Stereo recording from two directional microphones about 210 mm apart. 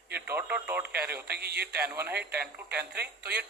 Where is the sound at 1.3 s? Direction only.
50° right (ahead or behind).